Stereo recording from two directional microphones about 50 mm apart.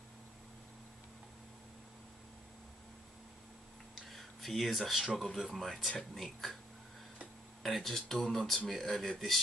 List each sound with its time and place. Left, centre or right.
4.1 s a sound: centre
5.0 s speech: centre
7.6 s speech: centre